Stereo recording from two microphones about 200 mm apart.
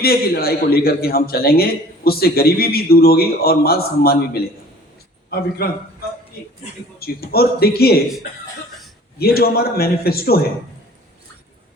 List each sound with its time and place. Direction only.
0.0 s a man's voice: 50° left (ahead or behind)
7.0 s a man's voice: 50° left (ahead or behind)
9.1 s a man's voice: 50° left (ahead or behind)